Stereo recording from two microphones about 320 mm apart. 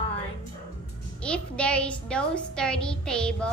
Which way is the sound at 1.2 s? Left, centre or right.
Centre.